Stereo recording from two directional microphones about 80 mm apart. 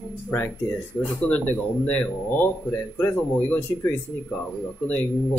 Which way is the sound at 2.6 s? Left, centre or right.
Left.